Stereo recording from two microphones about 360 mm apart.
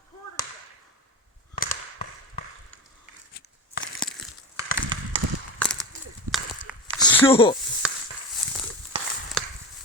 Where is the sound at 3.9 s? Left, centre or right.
Centre.